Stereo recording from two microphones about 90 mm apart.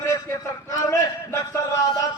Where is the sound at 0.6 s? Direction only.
35° left (ahead or behind).